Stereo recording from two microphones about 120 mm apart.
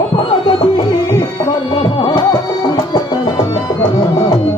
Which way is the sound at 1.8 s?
45° left (ahead or behind).